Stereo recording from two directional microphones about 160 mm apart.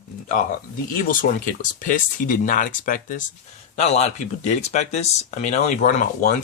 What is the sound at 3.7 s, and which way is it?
Speech, 45° left (ahead or behind).